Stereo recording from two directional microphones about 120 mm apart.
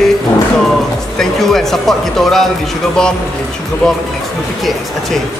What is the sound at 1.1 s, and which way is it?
A man's voice, centre (ahead or behind).